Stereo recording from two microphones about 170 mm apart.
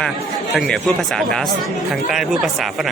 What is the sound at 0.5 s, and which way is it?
A man's voice, centre (ahead or behind).